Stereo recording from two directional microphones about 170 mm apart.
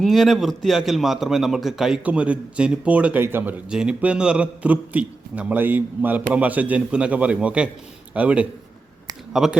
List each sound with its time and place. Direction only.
0.0 s a man's voice: centre (ahead or behind)